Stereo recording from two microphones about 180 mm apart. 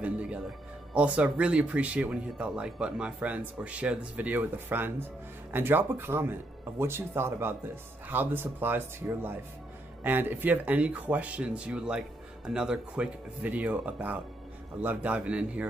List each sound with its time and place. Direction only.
0.0 s music: 5° right (ahead or behind)
0.9 s speech: 5° right (ahead or behind)